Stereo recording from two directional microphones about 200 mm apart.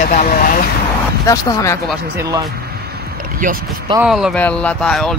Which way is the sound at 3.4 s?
40° right (ahead or behind).